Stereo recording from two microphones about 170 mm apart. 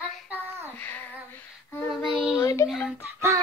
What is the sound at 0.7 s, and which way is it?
Child singing, 10° left (ahead or behind).